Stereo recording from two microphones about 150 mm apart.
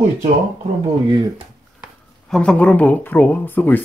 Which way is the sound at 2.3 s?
5° left (ahead or behind).